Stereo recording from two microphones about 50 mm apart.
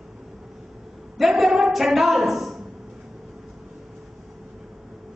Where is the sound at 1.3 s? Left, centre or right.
Centre.